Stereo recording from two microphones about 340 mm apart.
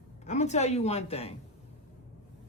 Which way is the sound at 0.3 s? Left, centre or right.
Centre.